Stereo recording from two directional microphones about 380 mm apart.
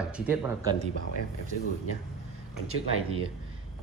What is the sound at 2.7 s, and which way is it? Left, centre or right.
Speech, right.